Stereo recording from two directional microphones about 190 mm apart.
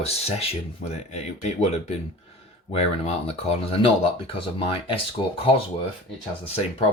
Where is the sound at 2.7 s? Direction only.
35° left (ahead or behind).